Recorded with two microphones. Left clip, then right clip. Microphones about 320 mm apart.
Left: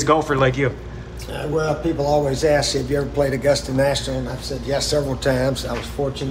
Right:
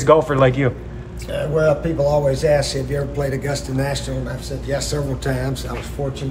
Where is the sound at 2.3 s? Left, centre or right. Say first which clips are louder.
Even; centre.